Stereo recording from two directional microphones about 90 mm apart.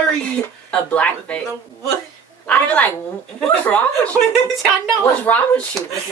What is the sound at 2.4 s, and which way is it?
Speech, 15° left (ahead or behind).